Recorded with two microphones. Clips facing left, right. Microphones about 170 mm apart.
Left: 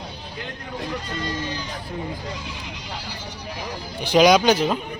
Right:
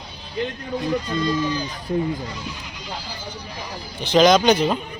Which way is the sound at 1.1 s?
80° left.